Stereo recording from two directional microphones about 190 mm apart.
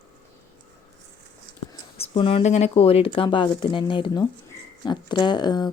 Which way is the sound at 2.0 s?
30° left (ahead or behind).